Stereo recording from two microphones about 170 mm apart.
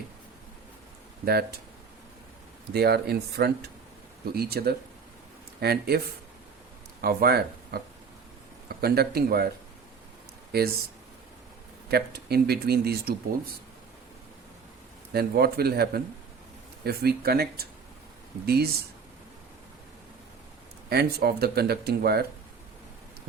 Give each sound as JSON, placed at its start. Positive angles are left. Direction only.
{"t": 1.2, "sound": "speech", "side_deg": -65}
{"t": 2.7, "sound": "speech", "side_deg": -70}
{"t": 7.0, "sound": "speech", "side_deg": -65}
{"t": 8.8, "sound": "speech", "side_deg": -65}
{"t": 10.5, "sound": "speech", "side_deg": -70}
{"t": 11.9, "sound": "speech", "side_deg": -70}
{"t": 15.1, "sound": "speech", "side_deg": -65}
{"t": 20.9, "sound": "speech", "side_deg": -70}